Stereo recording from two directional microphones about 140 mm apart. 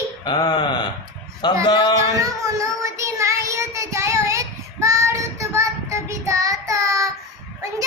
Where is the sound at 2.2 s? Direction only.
20° right (ahead or behind).